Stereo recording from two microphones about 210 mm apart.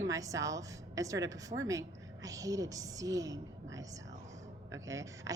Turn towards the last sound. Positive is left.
turn(degrees=-15)  # may be behind; listen again after turning